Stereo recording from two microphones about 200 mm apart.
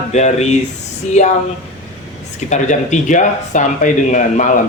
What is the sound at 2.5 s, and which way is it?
A woman's voice, 35° left (ahead or behind).